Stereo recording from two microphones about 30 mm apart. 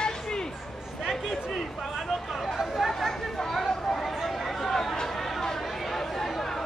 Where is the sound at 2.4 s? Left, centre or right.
Centre.